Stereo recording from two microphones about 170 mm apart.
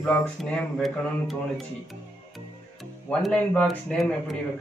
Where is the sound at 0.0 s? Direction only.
5° left (ahead or behind).